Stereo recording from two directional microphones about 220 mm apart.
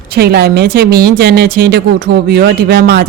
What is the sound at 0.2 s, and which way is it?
Speech, 45° right (ahead or behind).